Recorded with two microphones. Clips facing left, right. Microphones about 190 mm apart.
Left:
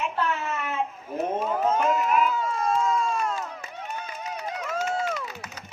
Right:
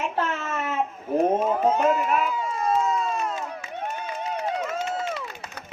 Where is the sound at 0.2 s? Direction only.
45° right (ahead or behind).